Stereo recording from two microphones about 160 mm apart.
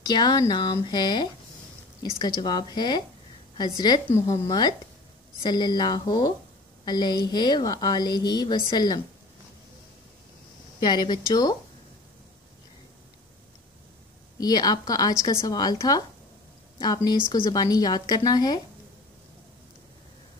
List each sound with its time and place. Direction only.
0.0 s a woman's voice: 25° left (ahead or behind)
10.8 s a woman's voice: 25° left (ahead or behind)
14.4 s a woman's voice: 25° left (ahead or behind)